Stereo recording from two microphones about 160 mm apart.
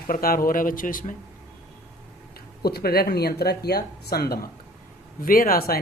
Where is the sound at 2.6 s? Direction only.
75° left (ahead or behind).